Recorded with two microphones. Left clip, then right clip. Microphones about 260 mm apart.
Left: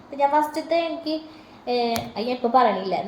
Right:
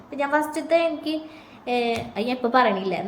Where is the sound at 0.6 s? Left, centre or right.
Centre.